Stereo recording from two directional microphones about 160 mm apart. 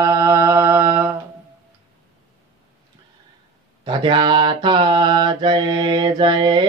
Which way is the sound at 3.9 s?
30° right (ahead or behind).